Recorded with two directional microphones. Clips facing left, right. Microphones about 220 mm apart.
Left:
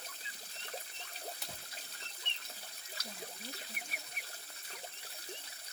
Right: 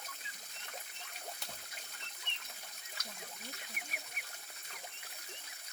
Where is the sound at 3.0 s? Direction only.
35° left (ahead or behind).